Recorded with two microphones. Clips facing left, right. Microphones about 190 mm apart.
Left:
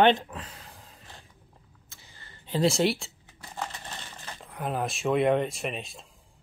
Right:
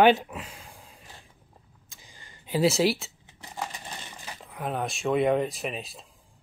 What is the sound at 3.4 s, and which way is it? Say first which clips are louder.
Crumpling: right 1 dB; 15° right (ahead or behind).